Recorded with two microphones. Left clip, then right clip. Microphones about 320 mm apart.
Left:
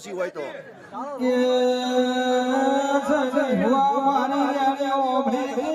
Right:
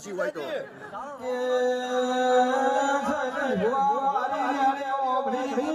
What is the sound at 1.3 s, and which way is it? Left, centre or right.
Music, left.